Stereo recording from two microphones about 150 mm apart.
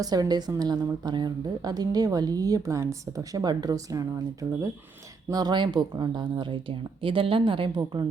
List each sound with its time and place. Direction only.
0.0 s a woman's voice: 25° right (ahead or behind)